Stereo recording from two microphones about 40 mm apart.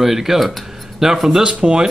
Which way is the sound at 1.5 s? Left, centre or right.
Right.